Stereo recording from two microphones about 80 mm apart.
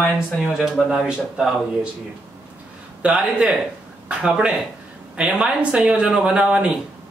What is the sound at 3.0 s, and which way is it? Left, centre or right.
A man's voice, centre.